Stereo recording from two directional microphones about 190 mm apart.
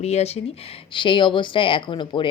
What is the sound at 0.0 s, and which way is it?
Speech, 35° left (ahead or behind).